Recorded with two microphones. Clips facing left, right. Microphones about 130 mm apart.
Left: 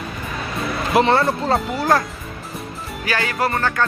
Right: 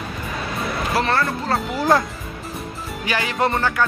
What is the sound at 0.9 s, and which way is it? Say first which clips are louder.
Speech: left 6 dB; 20° left (ahead or behind).